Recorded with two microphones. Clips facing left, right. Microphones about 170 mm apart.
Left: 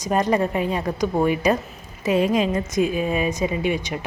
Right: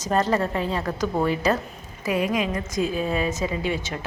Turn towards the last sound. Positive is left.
turn(degrees=15)  # may be behind; listen again after turning